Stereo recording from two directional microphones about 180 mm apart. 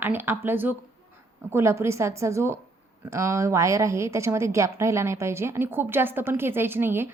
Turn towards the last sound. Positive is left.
turn(degrees=-10)  # may be behind; listen again after turning